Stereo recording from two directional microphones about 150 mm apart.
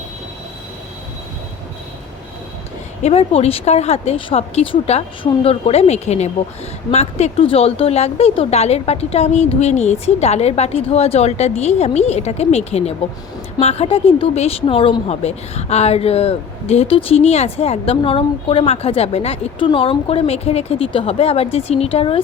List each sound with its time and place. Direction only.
3.0 s a woman's voice: 45° left (ahead or behind)